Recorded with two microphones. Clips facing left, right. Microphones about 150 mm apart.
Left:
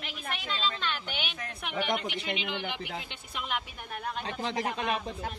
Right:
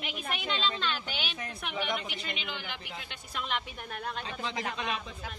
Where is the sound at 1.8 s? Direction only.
80° left.